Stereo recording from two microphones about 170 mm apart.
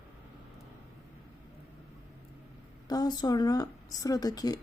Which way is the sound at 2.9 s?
25° left (ahead or behind).